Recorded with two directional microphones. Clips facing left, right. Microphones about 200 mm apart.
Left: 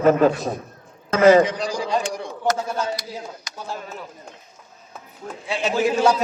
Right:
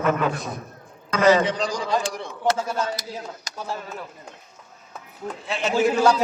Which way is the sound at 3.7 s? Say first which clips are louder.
Even; centre (ahead or behind).